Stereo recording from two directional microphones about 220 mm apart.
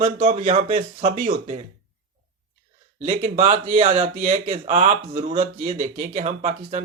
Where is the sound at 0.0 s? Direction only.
30° right (ahead or behind).